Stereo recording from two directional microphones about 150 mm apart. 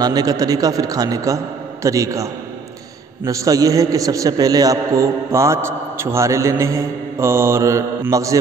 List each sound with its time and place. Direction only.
0.0 s a man's voice: 25° right (ahead or behind)
3.3 s a man's voice: 20° right (ahead or behind)